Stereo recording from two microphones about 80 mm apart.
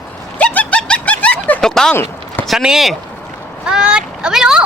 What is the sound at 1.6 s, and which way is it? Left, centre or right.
Speech, centre.